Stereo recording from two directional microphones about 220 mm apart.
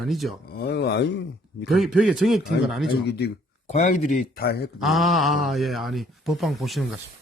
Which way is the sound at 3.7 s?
35° left (ahead or behind).